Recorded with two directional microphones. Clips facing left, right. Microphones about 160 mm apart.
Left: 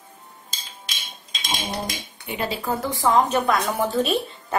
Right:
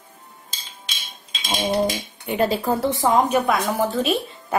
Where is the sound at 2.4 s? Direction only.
40° right (ahead or behind).